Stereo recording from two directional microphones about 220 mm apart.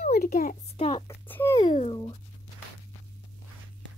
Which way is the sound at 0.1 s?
40° left (ahead or behind).